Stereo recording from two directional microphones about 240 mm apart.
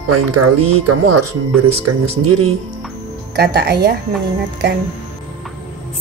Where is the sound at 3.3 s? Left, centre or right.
Right.